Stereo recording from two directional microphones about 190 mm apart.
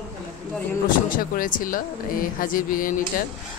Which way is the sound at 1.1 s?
45° left (ahead or behind).